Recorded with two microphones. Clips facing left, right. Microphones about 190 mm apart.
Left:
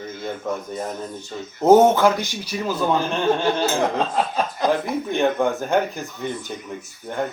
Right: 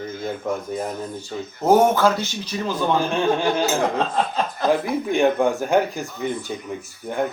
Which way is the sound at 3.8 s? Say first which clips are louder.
Even; 10° left (ahead or behind).